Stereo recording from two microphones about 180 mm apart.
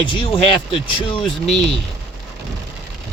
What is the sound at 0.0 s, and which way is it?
Speech, 30° left (ahead or behind).